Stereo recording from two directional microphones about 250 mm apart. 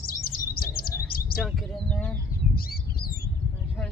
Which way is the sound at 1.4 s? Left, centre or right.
Centre.